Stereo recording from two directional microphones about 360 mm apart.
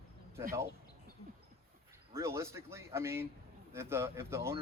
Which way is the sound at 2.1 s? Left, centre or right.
Centre.